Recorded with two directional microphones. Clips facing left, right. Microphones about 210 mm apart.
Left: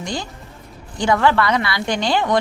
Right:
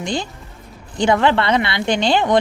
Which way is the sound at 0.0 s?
25° right (ahead or behind).